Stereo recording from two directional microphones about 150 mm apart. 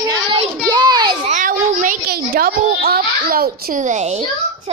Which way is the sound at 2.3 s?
90° right.